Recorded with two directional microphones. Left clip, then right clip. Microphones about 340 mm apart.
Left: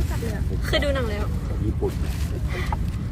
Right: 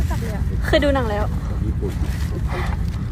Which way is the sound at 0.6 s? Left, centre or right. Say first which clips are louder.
Right 6 dB; right.